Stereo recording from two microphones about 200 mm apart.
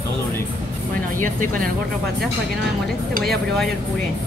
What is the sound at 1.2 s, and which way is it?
Speech, 40° right (ahead or behind).